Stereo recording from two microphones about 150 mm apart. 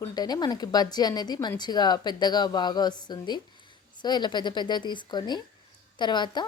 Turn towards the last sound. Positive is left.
turn(degrees=30)  # may be behind; listen again after turning